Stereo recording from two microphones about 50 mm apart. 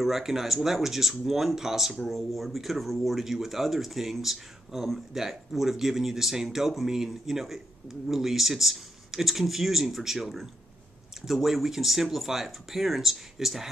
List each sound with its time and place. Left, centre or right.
0.0 s speech: centre